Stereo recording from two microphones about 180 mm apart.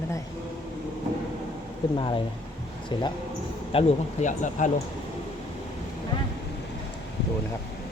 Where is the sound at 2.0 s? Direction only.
30° left (ahead or behind).